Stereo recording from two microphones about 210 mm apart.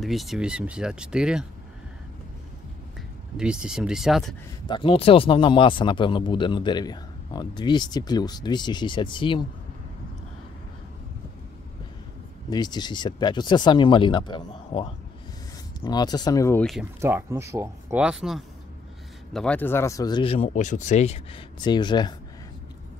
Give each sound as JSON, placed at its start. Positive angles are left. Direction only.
{"t": 0.0, "sound": "speech", "side_deg": 0}
{"t": 3.3, "sound": "speech", "side_deg": -5}
{"t": 4.6, "sound": "speech", "side_deg": 25}
{"t": 12.4, "sound": "speech", "side_deg": 20}
{"t": 17.0, "sound": "speech", "side_deg": -15}